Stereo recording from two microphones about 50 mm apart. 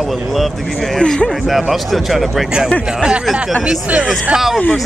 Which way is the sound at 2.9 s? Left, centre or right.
Centre.